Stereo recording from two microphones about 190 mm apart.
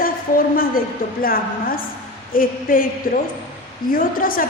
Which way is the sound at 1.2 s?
50° left (ahead or behind).